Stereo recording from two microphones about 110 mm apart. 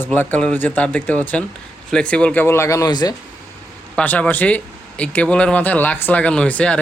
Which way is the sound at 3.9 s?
15° left (ahead or behind).